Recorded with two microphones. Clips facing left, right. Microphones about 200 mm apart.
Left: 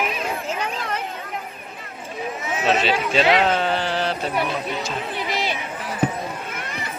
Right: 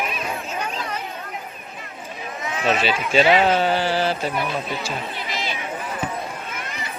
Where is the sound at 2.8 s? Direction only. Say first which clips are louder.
Right 1 dB; 5° right (ahead or behind).